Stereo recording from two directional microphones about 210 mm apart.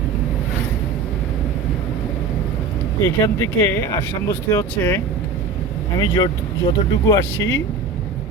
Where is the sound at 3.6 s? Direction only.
10° left (ahead or behind).